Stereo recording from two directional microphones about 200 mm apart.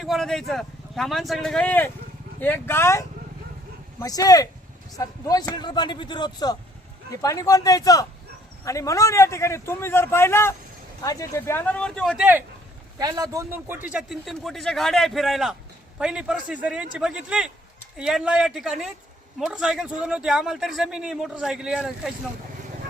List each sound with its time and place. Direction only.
0.0 s a man's voice: centre (ahead or behind)
13.0 s a man's voice: 20° right (ahead or behind)